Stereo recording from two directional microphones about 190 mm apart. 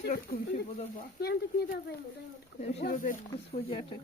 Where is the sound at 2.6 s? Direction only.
35° left (ahead or behind).